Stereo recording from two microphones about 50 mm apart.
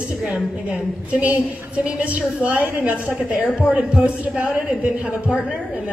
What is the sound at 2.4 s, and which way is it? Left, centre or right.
A woman's voice, right.